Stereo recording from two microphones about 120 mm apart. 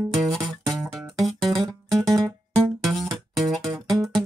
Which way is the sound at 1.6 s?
30° right (ahead or behind).